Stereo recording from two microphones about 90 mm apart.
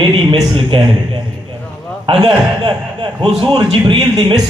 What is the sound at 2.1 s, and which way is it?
Speech, 85° right.